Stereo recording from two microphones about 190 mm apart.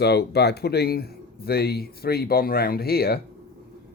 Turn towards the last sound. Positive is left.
turn(degrees=55)  # may be behind; listen again after turning